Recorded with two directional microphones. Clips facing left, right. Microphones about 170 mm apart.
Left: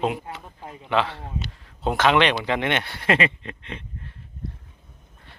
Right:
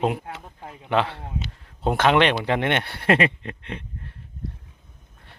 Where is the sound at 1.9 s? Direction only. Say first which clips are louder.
Right 1 dB; 50° right (ahead or behind).